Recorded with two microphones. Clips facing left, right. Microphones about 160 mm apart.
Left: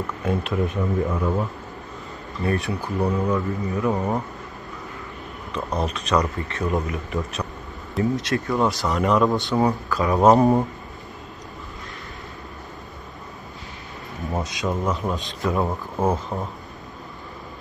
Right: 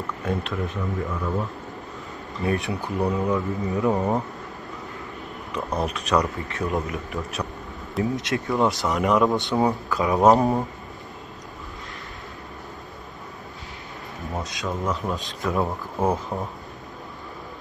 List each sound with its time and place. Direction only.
0.2 s speech: 5° left (ahead or behind)
0.7 s speech: 20° left (ahead or behind)
2.5 s speech: 20° right (ahead or behind)
2.8 s speech: centre (ahead or behind)
3.6 s speech: 20° right (ahead or behind)
5.5 s speech: 5° right (ahead or behind)
8.2 s speech: 20° right (ahead or behind)
10.1 s speech: centre (ahead or behind)
14.4 s speech: centre (ahead or behind)